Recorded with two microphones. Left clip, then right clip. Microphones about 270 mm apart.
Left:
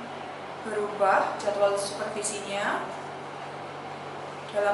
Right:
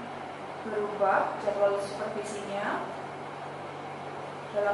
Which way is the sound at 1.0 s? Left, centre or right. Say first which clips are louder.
Left 3 dB; centre.